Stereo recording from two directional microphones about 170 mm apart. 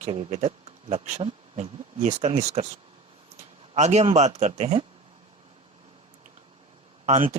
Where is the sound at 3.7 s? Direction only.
40° right (ahead or behind).